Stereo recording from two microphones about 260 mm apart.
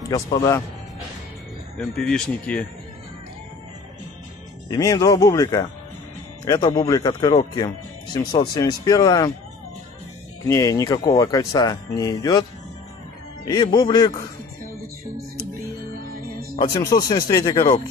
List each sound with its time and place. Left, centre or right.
0.1 s speech: centre
1.8 s speech: centre
4.6 s speech: centre
10.4 s speech: centre
13.5 s speech: centre
16.0 s music: right
16.7 s speech: centre